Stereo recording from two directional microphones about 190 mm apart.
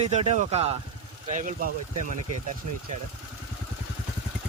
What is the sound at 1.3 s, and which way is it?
Speech, 45° right (ahead or behind).